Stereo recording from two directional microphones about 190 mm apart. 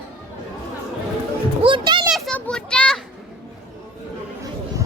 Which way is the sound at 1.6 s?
25° right (ahead or behind).